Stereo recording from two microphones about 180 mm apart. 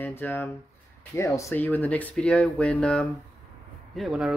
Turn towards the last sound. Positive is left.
turn(degrees=0)  # may be behind; listen again after turning